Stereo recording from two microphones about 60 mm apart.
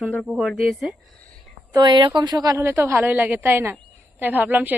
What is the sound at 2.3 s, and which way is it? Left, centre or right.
Speech, right.